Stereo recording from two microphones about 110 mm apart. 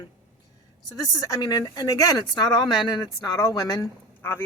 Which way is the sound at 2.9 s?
35° left (ahead or behind).